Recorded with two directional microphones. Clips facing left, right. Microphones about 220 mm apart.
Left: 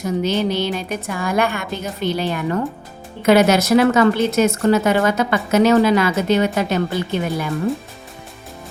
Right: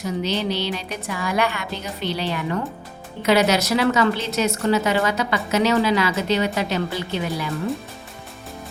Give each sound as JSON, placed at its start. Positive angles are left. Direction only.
{"t": 0.0, "sound": "a woman's voice", "side_deg": 50}